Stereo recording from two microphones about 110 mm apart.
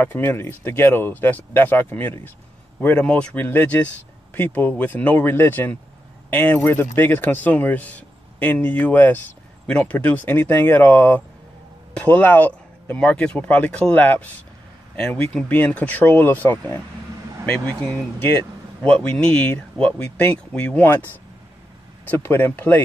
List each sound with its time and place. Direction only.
0.0 s speech: 20° left (ahead or behind)
15.3 s speech: 15° left (ahead or behind)
19.0 s speech: 10° left (ahead or behind)